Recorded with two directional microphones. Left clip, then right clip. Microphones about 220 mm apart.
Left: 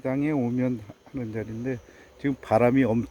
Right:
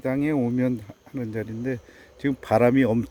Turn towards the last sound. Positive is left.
turn(degrees=-15)  # may be behind; listen again after turning